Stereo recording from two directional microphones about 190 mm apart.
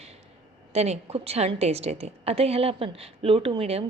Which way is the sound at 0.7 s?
35° right (ahead or behind).